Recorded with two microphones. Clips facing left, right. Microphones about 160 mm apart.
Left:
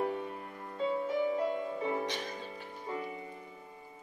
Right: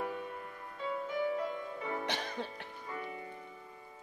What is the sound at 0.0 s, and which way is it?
Music, 35° left (ahead or behind).